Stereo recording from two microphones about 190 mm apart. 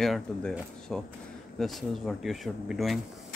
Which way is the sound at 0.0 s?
5° left (ahead or behind).